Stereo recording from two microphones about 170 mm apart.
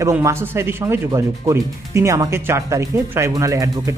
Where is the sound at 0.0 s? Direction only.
15° right (ahead or behind).